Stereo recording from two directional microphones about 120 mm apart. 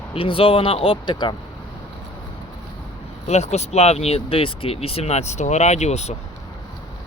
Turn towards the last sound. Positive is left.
turn(degrees=65)  # may be behind; listen again after turning